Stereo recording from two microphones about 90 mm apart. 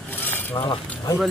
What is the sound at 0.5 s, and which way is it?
Speech, 75° left (ahead or behind).